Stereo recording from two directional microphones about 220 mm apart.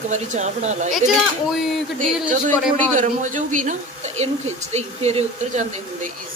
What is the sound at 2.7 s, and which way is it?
A woman's voice, 35° right (ahead or behind).